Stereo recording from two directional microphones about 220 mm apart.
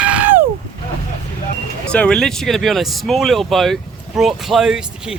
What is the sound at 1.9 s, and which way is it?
Speech, 5° left (ahead or behind).